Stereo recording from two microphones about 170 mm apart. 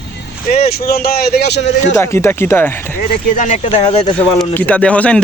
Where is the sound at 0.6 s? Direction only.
65° left (ahead or behind); by 1.9 s 90° left.